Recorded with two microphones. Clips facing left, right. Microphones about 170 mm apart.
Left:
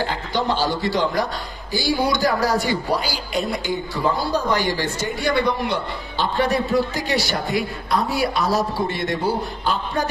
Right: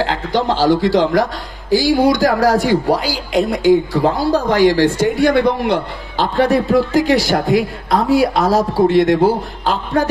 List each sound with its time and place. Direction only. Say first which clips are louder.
0.0 s speech: right 6 dB; 90° right
5.2 s a man's voice: right 7 dB; 55° right (ahead or behind)
5.7 s speech: right 7 dB; 90° right